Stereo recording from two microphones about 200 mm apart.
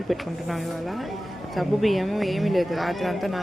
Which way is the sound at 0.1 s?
Centre (ahead or behind).